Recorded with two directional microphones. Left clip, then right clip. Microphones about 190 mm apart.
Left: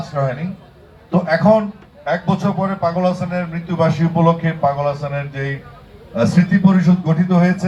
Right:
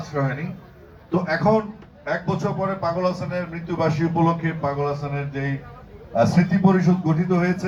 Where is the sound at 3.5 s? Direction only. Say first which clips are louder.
Left 6 dB; 50° right (ahead or behind).